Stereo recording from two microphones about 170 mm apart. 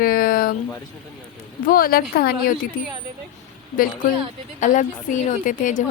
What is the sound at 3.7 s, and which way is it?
A woman's voice, 55° left (ahead or behind).